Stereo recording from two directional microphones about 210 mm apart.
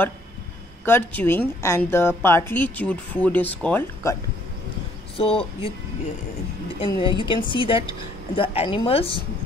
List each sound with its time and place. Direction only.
0.8 s a woman's voice: 10° left (ahead or behind)
5.1 s speech: 25° left (ahead or behind)
6.9 s speech: 25° left (ahead or behind)